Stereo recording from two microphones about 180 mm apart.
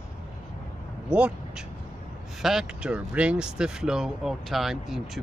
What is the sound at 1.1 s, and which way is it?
Speech, 5° right (ahead or behind).